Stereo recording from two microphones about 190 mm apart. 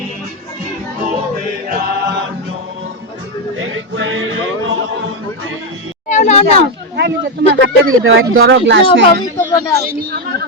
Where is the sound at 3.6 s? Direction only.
90° right.